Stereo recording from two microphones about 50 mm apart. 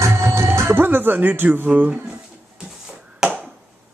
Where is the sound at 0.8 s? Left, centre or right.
Right.